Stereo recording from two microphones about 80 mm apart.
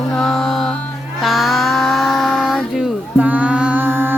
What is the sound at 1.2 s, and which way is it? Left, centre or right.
Music, centre.